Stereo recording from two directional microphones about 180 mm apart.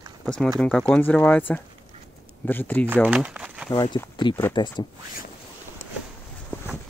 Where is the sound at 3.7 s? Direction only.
25° left (ahead or behind).